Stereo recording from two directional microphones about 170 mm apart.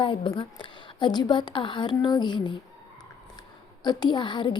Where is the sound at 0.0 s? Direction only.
30° left (ahead or behind).